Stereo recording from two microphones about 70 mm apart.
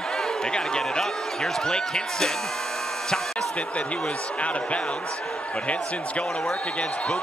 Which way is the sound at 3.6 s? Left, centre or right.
Centre.